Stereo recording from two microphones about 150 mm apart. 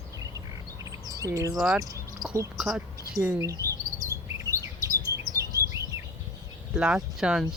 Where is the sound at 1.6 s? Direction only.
Centre (ahead or behind).